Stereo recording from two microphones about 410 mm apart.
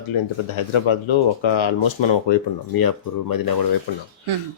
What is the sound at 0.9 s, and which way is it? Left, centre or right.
Speech, left.